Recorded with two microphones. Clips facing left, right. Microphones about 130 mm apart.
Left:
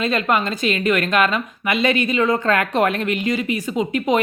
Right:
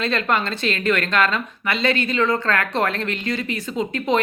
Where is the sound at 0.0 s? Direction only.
10° left (ahead or behind).